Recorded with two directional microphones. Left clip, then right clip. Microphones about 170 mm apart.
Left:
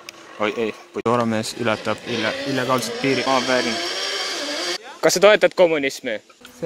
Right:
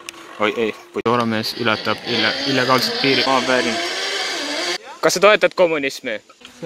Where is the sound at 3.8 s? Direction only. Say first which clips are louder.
Right 2 dB; 35° right (ahead or behind).